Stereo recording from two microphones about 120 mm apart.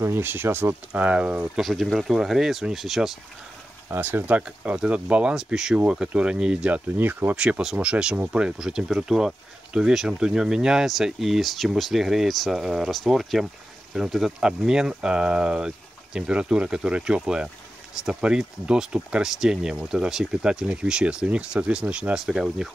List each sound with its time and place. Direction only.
0.0 s speech: 20° right (ahead or behind)
1.6 s speech: centre (ahead or behind)
3.9 s speech: 15° right (ahead or behind)